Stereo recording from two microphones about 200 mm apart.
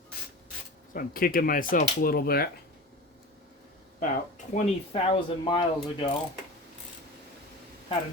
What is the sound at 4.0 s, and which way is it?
Speech, 40° left (ahead or behind).